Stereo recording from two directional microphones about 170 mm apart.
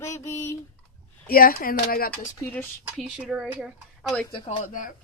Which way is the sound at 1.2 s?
60° left (ahead or behind).